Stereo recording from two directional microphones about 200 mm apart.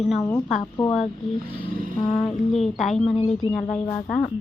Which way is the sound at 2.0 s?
25° left (ahead or behind).